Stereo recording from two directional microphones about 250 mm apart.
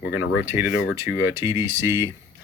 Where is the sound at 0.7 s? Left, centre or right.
Left.